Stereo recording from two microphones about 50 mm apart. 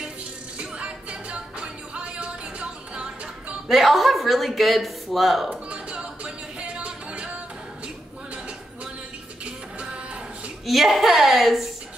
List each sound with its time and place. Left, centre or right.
0.6 s music: right
3.6 s speech: centre
5.7 s music: right
10.7 s speech: centre